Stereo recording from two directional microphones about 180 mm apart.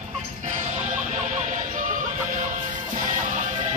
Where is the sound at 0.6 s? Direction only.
40° right (ahead or behind).